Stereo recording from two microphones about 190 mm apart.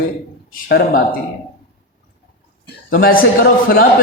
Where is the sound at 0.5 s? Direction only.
50° left (ahead or behind).